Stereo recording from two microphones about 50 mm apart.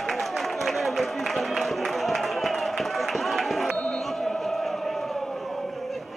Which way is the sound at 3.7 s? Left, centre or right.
Left.